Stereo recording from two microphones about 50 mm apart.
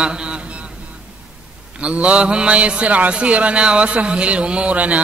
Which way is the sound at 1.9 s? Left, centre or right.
Right.